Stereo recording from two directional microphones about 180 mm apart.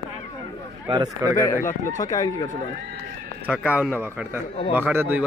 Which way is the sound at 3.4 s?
5° right (ahead or behind).